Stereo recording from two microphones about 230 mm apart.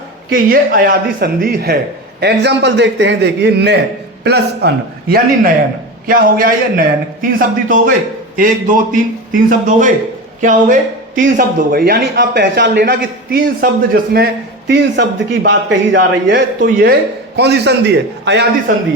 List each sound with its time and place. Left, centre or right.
0.3 s a man's voice: right